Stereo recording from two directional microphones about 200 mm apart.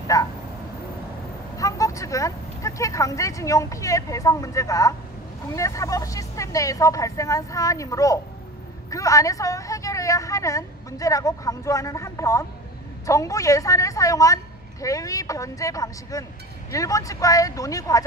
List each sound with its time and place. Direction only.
0.1 s a woman's voice: 20° left (ahead or behind)
1.6 s a woman's voice: 15° left (ahead or behind)